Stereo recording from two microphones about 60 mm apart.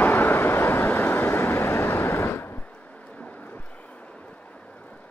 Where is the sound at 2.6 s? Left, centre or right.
Left.